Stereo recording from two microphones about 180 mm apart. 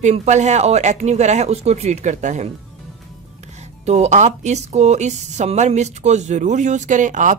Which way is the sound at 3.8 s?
35° right (ahead or behind).